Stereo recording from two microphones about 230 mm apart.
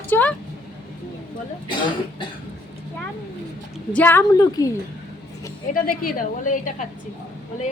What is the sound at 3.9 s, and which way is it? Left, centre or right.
Speech, centre.